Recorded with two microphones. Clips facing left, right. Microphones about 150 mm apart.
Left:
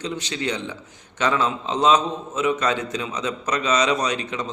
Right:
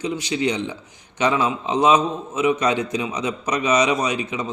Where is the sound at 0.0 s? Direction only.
10° right (ahead or behind).